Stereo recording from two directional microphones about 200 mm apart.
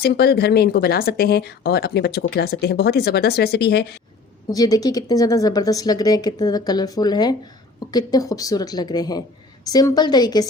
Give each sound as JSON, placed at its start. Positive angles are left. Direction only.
{"t": 0.0, "sound": "speech", "side_deg": 55}
{"t": 4.4, "sound": "speech", "side_deg": 20}